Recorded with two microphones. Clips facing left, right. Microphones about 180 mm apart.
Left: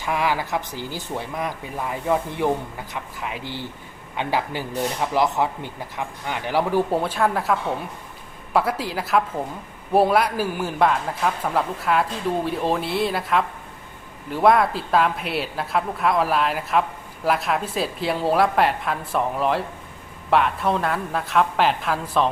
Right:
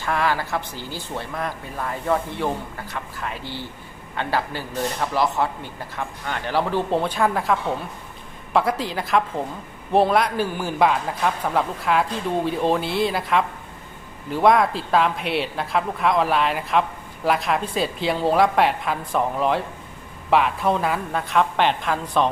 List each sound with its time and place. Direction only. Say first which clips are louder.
0.0 s a woman's voice: even; 15° left (ahead or behind)